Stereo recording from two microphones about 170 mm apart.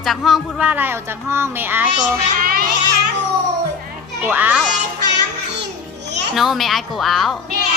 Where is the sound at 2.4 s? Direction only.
60° right (ahead or behind).